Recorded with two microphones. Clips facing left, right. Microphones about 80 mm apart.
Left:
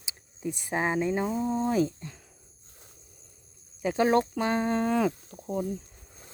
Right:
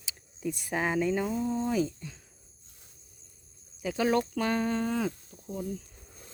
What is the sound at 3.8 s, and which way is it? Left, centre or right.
Speech, left.